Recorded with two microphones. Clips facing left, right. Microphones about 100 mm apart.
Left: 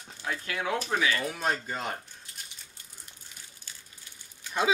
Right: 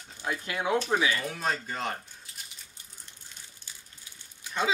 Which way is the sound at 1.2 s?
5° left (ahead or behind).